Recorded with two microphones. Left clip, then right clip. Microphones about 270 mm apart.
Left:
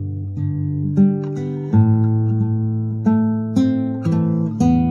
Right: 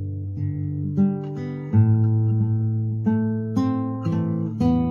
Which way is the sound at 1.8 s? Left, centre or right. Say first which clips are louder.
Left 5 dB; left.